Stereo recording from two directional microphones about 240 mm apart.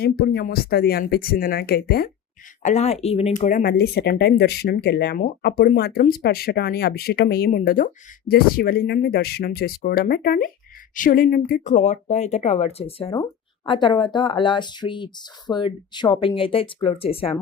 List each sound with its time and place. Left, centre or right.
0.0 s speech: left
2.6 s speech: left